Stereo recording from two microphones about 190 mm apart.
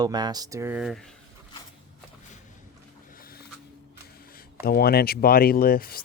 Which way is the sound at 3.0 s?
50° left (ahead or behind).